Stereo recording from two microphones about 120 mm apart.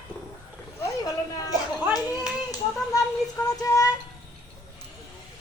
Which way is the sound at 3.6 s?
30° left (ahead or behind).